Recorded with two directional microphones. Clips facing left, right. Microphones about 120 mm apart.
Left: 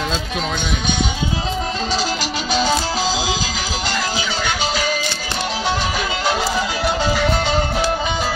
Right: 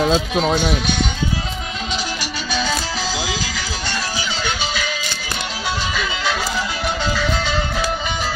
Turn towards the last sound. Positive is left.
turn(degrees=45)  # may be behind; listen again after turning